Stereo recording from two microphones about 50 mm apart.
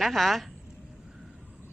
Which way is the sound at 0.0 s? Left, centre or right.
Centre.